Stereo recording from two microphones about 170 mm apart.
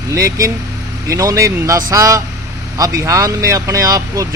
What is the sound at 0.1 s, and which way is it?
Speech, 15° right (ahead or behind).